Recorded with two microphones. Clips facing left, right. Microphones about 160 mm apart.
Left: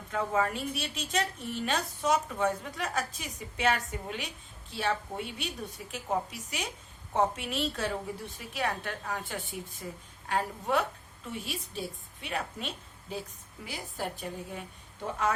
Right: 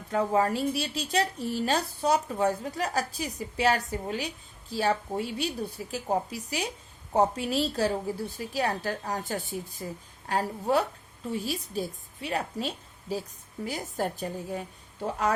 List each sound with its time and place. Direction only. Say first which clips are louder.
0.1 s a woman's voice: right 5 dB; 35° right (ahead or behind)